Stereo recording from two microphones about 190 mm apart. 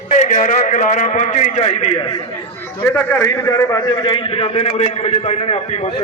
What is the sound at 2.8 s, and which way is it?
A man's voice, 10° left (ahead or behind).